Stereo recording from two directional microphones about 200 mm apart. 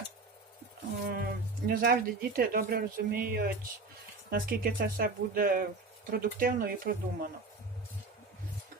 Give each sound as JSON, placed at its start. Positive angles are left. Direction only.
{"t": 1.0, "sound": "speech", "side_deg": -45}